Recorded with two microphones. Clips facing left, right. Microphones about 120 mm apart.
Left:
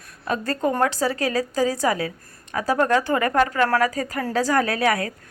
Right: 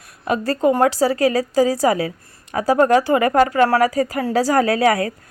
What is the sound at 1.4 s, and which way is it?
A woman's voice, 35° right (ahead or behind).